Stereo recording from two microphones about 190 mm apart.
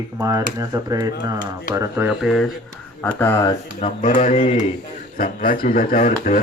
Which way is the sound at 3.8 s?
40° left (ahead or behind).